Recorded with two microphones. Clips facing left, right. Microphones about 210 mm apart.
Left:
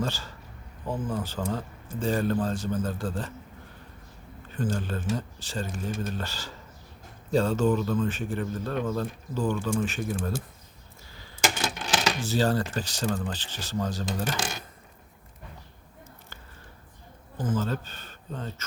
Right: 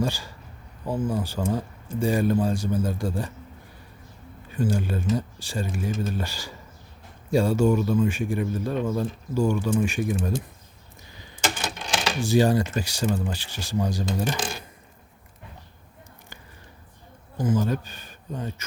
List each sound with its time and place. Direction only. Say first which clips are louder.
0.0 s a man's voice: right 4 dB; 10° right (ahead or behind)
4.4 s a man's voice: right 4 dB; 10° right (ahead or behind)
11.1 s a sound: right 2 dB; 20° right (ahead or behind)
12.2 s a man's voice: right 8 dB; 15° right (ahead or behind)
17.3 s speech: right 4 dB; 10° right (ahead or behind)